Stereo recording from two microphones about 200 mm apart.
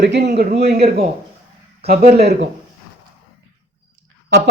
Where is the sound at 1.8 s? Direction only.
50° right (ahead or behind).